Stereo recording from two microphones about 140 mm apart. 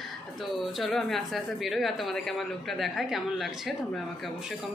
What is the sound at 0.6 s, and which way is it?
Speech, centre (ahead or behind).